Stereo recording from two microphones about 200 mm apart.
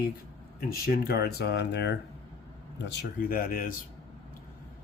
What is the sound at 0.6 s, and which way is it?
Speech, 50° left (ahead or behind).